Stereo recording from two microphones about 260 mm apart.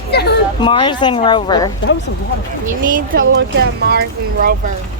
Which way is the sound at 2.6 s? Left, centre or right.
Right.